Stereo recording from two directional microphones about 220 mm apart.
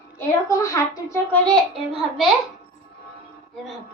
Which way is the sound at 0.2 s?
15° left (ahead or behind).